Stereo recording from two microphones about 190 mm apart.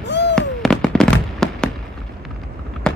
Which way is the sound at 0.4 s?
Centre (ahead or behind).